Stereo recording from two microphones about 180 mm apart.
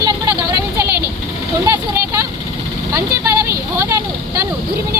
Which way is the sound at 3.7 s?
15° right (ahead or behind).